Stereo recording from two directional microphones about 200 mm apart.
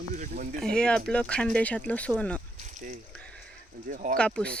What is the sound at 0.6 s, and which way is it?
Speech, 5° left (ahead or behind).